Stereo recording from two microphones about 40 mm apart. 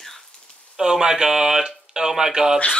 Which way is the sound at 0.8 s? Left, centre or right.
Centre.